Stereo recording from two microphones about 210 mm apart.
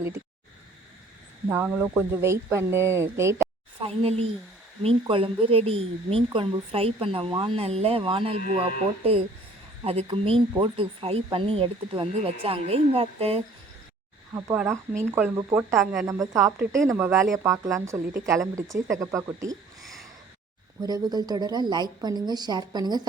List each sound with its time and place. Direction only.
1.5 s speech: 10° right (ahead or behind)
3.8 s speech: 25° right (ahead or behind)
14.3 s speech: 10° right (ahead or behind)
16.0 s speech: 15° right (ahead or behind)
19.8 s a sound: centre (ahead or behind)
20.8 s speech: 20° right (ahead or behind)